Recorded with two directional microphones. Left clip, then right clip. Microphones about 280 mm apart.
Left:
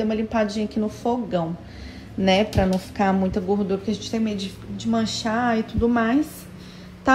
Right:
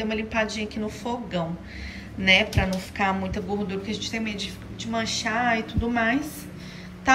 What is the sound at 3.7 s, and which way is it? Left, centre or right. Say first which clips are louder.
Speech: left 4 dB; centre.